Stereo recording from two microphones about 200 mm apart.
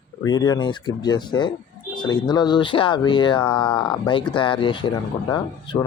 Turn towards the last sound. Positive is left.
turn(degrees=20)  # may be behind; listen again after turning